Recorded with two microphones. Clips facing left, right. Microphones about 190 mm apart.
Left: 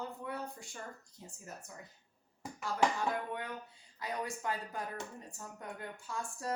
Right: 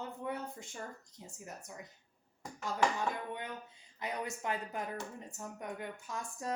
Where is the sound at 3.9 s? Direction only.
20° right (ahead or behind).